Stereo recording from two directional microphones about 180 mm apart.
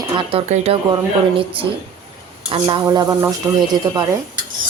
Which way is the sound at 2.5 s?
25° right (ahead or behind).